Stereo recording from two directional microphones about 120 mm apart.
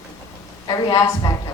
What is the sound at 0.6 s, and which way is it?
Speech, 30° left (ahead or behind).